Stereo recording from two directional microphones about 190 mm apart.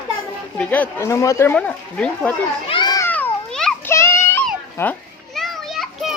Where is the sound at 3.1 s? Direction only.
10° left (ahead or behind).